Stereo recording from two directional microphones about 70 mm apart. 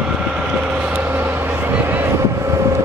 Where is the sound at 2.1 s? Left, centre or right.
Right.